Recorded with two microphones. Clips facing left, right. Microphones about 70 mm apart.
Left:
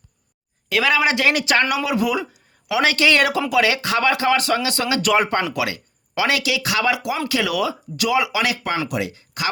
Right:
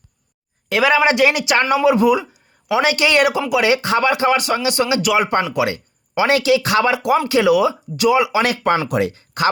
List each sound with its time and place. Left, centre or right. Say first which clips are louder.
0.7 s speech: right 4 dB; right
1.5 s a man's voice: right 5 dB; right
5.0 s speech: left 2 dB; centre
5.5 s speech: right 5 dB; right
8.4 s speech: right 5 dB; right